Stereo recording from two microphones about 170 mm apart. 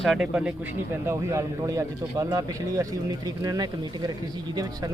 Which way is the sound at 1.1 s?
15° right (ahead or behind).